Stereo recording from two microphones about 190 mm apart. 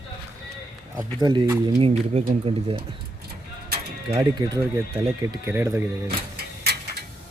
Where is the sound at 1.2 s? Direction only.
20° right (ahead or behind).